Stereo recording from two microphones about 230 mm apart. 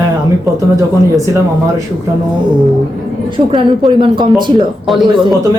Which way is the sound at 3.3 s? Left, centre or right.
Right.